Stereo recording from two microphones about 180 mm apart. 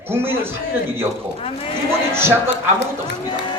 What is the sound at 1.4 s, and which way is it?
Speech, 30° left (ahead or behind).